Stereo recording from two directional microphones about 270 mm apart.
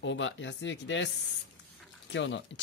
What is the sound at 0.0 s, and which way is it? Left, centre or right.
Speech, left.